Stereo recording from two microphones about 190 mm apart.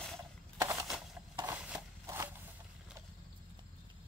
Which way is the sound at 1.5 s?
5° right (ahead or behind).